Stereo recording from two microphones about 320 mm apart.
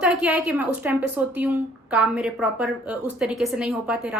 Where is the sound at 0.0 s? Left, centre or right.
Centre.